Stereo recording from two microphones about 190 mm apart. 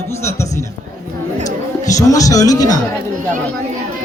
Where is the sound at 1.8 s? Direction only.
20° left (ahead or behind).